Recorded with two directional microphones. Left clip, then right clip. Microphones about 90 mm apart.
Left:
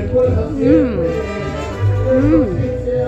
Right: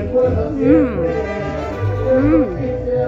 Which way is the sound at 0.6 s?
50° left (ahead or behind).